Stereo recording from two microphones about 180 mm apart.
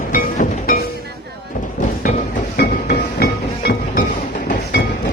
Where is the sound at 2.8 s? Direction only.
60° left (ahead or behind).